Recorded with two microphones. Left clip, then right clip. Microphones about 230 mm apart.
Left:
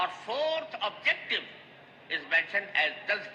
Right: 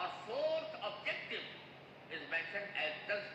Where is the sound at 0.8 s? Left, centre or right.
Left.